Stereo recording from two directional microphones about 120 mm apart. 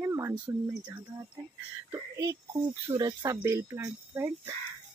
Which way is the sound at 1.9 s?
25° right (ahead or behind).